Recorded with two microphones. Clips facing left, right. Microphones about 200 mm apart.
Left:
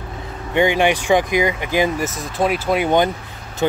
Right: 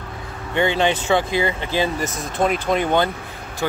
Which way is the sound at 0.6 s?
15° left (ahead or behind).